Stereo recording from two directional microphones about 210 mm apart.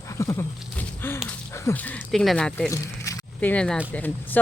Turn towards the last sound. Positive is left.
turn(degrees=10)  # may be behind; listen again after turning